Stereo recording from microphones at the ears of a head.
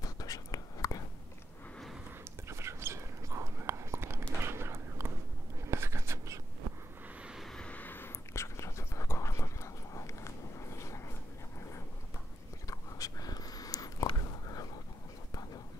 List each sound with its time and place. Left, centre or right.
0.0 s whispering: left
2.4 s whispering: right
5.7 s writing: right
7.3 s vehicle: centre
8.4 s whispering: left
9.9 s a sound: left
12.6 s a sound: left